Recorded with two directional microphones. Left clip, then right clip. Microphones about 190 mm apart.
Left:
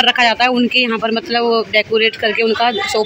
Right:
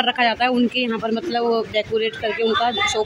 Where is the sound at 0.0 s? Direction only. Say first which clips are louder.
Left 6 dB; 5° left (ahead or behind).